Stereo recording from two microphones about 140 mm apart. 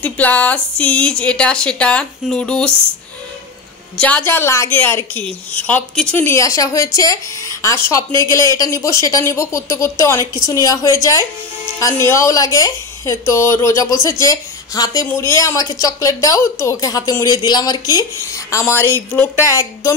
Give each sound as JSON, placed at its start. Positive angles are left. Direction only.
{"t": 0.0, "sound": "a woman's voice", "side_deg": 10}
{"t": 3.9, "sound": "a woman's voice", "side_deg": 10}